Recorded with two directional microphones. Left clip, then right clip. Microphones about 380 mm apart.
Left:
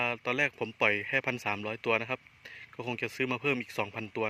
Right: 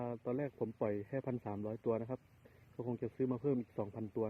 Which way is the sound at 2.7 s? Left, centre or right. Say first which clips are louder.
Left 6 dB; left.